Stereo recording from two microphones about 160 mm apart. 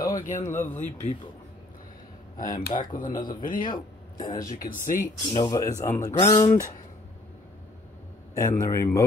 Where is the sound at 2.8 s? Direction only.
55° left (ahead or behind).